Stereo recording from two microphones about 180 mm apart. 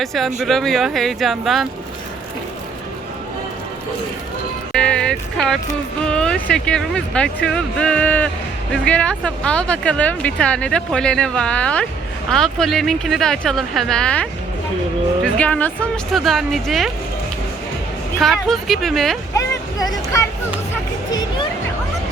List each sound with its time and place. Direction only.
0.0 s speech: centre (ahead or behind)
4.7 s music: 5° left (ahead or behind)
6.1 s speech: 5° left (ahead or behind)
18.2 s speech: centre (ahead or behind)
19.3 s speech: 20° left (ahead or behind)
21.1 s music: 25° left (ahead or behind)